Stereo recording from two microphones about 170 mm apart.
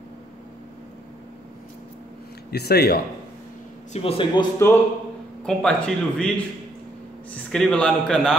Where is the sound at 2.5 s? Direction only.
70° left (ahead or behind).